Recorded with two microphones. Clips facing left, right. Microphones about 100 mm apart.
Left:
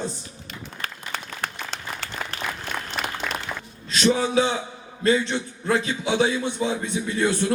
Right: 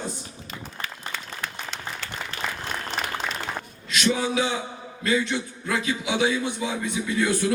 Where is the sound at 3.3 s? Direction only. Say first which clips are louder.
Left 2 dB; 60° left (ahead or behind).